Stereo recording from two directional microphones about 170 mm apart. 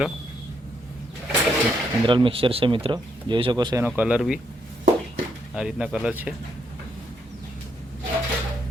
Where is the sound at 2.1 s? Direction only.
30° right (ahead or behind).